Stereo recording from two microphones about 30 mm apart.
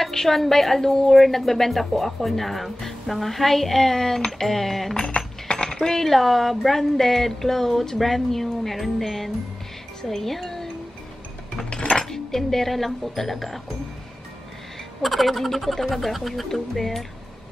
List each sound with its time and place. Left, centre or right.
0.1 s a woman's voice: centre
5.1 s coin: left
5.7 s speech: centre
11.7 s dishes: left
12.1 s speech: centre
15.0 s speech: centre